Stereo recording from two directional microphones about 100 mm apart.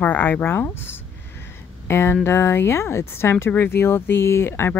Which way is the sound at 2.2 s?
25° left (ahead or behind).